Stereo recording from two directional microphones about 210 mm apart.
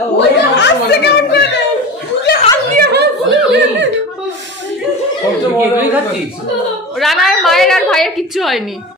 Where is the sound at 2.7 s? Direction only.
50° right (ahead or behind).